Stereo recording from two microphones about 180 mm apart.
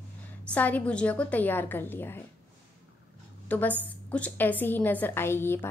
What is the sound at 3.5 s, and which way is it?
A woman's voice, 10° left (ahead or behind).